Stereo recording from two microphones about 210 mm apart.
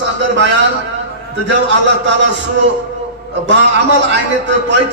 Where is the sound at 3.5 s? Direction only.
55° right (ahead or behind).